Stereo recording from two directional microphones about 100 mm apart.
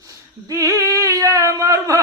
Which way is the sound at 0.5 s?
30° right (ahead or behind).